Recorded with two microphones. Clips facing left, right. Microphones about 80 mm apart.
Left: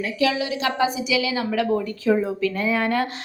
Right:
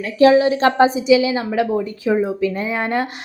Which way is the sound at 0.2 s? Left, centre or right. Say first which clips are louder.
Right 12 dB; right.